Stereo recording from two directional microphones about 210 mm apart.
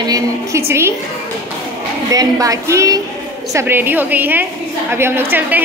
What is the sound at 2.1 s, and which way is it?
A woman's voice, 15° right (ahead or behind).